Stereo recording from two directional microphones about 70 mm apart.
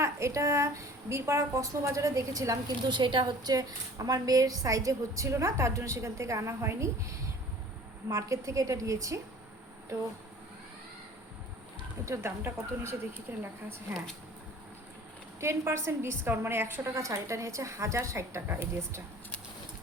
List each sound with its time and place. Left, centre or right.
0.0 s a woman's voice: right
2.9 s a woman's voice: right
8.0 s a woman's voice: right
12.0 s a woman's voice: right
15.4 s a woman's voice: right
16.9 s a woman's voice: right